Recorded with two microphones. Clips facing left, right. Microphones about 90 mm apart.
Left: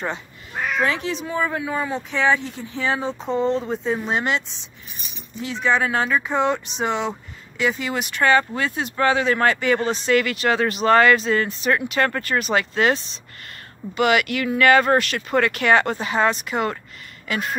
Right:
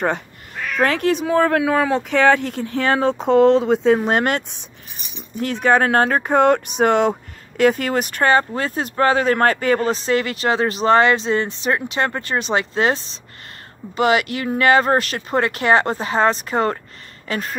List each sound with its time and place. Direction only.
0.7 s speech: 55° right (ahead or behind); by 17.4 s 35° right (ahead or behind)